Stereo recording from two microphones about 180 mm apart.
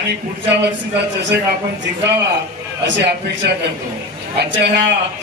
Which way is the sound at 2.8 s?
75° right (ahead or behind).